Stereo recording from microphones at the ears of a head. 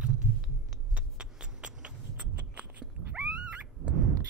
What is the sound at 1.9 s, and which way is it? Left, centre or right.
Cat, right.